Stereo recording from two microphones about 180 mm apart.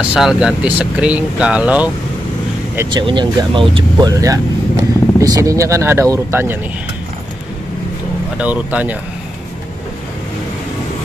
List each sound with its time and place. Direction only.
0.1 s speech: 5° right (ahead or behind)
2.9 s speech: 25° right (ahead or behind)
8.4 s speech: 5° right (ahead or behind)